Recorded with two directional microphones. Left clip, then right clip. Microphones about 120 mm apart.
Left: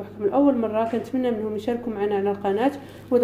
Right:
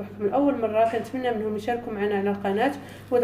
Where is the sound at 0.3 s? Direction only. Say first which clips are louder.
Left 2 dB; 35° left (ahead or behind).